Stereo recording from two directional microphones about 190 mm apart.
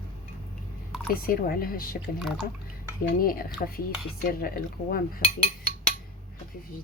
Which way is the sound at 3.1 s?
50° left (ahead or behind).